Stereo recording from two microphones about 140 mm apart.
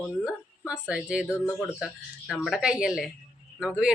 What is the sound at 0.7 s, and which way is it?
Speech, 5° right (ahead or behind).